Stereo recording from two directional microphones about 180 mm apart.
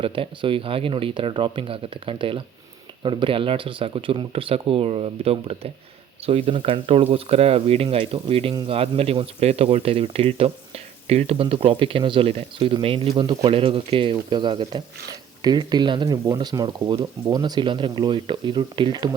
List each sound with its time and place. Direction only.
0.0 s speech: 30° right (ahead or behind)